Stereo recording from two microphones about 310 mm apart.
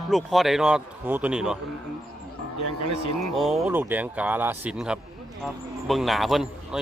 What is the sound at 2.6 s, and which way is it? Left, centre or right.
Speech, right.